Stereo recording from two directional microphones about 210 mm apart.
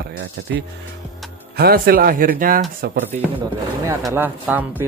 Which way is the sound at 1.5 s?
45° right (ahead or behind).